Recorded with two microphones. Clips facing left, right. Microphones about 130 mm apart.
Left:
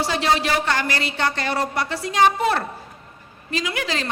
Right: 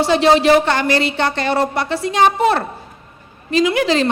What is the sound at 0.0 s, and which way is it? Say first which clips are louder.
A woman's voice: right 8 dB; 25° right (ahead or behind).